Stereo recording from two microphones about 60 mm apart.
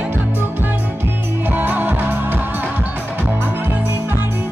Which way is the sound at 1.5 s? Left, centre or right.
Right.